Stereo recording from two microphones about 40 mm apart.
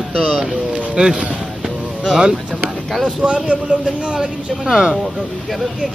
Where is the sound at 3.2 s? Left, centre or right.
Right.